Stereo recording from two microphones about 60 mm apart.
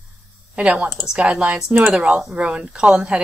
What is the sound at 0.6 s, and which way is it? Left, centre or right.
Speech, right.